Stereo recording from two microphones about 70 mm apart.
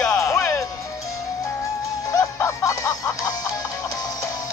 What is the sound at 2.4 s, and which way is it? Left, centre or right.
Music, left.